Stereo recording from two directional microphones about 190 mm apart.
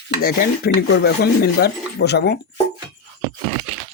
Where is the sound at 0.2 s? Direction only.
50° left (ahead or behind).